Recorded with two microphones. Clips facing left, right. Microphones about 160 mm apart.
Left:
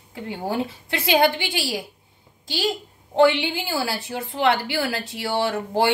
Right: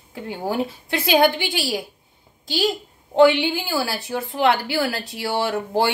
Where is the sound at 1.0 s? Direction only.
20° left (ahead or behind).